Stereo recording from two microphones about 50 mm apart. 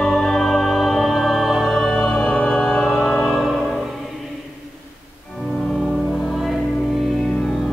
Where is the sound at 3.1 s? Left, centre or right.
Left.